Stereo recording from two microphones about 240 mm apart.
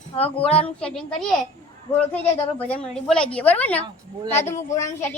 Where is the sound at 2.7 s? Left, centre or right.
Centre.